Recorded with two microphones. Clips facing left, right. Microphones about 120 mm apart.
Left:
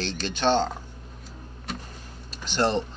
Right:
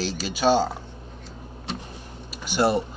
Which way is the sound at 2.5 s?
10° right (ahead or behind).